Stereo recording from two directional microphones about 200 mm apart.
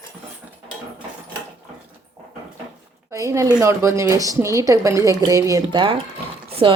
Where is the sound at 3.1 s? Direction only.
15° right (ahead or behind).